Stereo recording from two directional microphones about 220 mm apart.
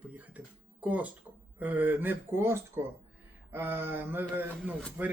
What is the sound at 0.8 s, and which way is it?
Mantra, 5° right (ahead or behind).